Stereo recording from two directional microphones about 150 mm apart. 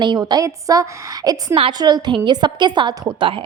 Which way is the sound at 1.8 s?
25° right (ahead or behind).